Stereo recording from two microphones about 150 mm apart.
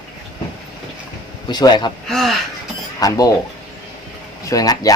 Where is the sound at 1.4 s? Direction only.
30° left (ahead or behind).